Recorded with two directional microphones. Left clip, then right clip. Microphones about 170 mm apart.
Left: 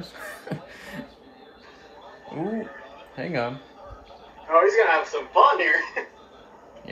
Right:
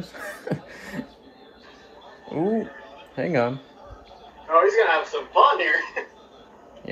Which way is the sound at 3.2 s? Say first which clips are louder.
Right 5 dB; 35° right (ahead or behind).